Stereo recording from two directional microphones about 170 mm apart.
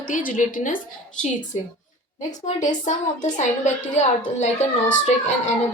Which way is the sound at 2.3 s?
45° left (ahead or behind).